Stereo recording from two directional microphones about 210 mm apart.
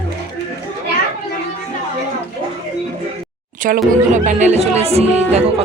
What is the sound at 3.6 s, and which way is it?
Speech, 40° right (ahead or behind).